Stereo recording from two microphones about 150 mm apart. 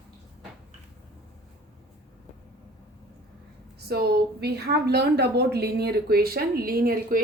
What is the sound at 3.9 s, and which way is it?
A woman's voice, 90° right.